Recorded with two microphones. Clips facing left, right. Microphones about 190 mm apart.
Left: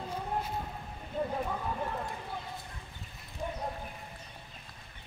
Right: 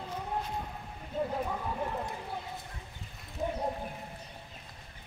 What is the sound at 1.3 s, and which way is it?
Clip-clop, 5° right (ahead or behind).